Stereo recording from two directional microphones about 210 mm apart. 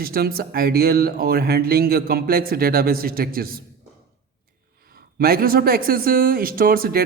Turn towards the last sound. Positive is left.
turn(degrees=-45)  # may be behind; listen again after turning